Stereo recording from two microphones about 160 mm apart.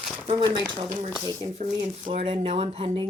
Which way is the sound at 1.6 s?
40° right (ahead or behind).